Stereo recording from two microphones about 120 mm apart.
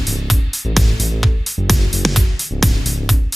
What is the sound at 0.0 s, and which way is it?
Music, centre (ahead or behind).